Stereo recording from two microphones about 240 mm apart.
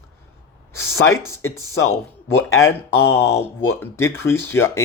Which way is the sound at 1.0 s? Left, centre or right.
Centre.